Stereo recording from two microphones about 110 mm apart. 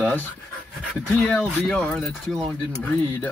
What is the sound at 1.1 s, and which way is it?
Speech, 10° left (ahead or behind).